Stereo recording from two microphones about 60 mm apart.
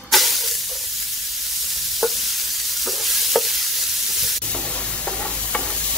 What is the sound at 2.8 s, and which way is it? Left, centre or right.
Stir, centre.